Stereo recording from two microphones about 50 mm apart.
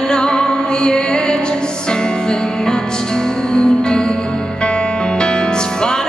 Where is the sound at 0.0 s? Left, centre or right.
Centre.